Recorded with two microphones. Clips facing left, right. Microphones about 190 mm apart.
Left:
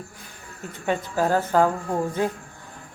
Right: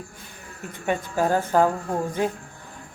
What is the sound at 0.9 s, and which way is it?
Speech, 15° right (ahead or behind).